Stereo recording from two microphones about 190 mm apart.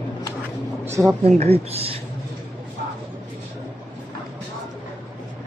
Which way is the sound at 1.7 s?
30° right (ahead or behind).